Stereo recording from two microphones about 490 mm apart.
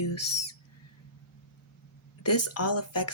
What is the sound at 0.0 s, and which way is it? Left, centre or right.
Owl, left.